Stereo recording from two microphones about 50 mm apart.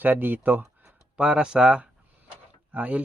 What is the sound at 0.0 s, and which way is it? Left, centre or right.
Speech, right.